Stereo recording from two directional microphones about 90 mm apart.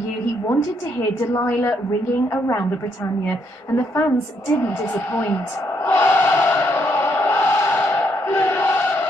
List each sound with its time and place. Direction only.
1.3 s a woman's voice: 30° left (ahead or behind)
3.3 s a woman's voice: 30° left (ahead or behind)
5.9 s chant: 25° left (ahead or behind)